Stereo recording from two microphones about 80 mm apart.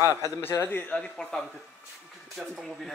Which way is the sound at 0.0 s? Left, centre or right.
Right.